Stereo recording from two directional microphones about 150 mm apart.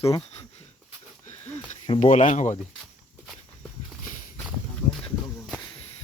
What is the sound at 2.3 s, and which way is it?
Speech, 55° left (ahead or behind).